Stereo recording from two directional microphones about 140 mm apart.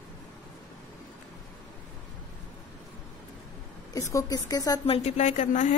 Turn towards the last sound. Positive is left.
turn(degrees=60)  # may be behind; listen again after turning